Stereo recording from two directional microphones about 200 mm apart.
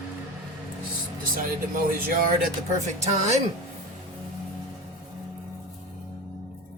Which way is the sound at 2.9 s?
35° right (ahead or behind).